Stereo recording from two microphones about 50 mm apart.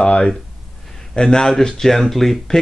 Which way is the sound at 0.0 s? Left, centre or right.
Left.